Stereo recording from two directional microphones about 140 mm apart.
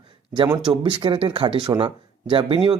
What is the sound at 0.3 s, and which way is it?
Speech, 30° right (ahead or behind).